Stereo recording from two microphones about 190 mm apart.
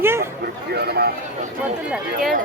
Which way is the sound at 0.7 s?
60° right (ahead or behind).